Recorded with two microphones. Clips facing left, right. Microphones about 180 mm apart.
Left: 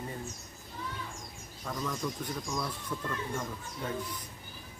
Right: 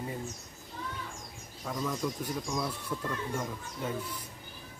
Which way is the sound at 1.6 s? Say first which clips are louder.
Right 2 dB; 5° right (ahead or behind).